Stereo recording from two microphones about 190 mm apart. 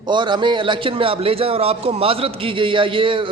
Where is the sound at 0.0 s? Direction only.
25° right (ahead or behind).